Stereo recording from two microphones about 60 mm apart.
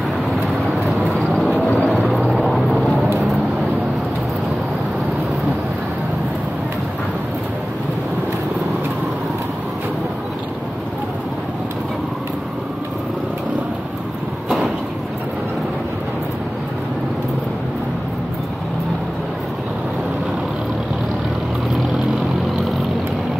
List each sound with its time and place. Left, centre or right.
1.6 s vehicle: left
1.9 s vehicle: centre